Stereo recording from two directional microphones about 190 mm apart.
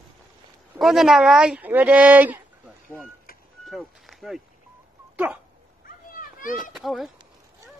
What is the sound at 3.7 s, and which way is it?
Speech, centre (ahead or behind).